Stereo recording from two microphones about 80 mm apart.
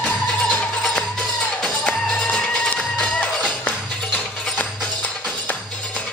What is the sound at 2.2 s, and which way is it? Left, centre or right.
Music, centre.